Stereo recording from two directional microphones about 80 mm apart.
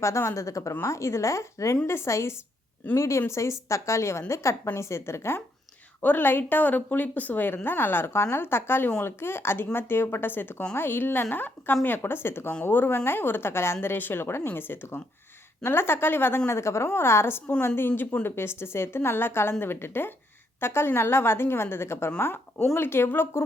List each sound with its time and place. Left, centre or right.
0.0 s a woman's voice: left